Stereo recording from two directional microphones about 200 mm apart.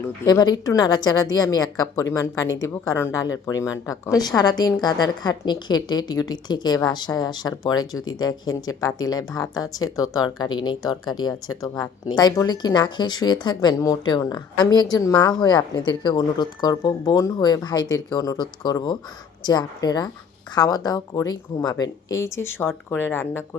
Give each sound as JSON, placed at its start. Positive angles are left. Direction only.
{"t": 0.3, "sound": "a woman's voice", "side_deg": 20}